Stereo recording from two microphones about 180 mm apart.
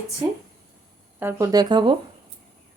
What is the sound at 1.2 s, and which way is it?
Speech, 20° right (ahead or behind).